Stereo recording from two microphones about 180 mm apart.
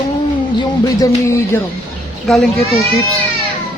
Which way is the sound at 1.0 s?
15° left (ahead or behind).